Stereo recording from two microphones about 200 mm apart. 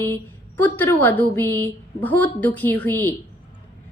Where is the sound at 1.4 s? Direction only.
20° right (ahead or behind).